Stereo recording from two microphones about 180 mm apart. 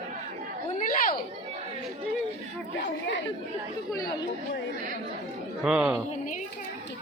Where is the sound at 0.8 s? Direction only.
45° left (ahead or behind).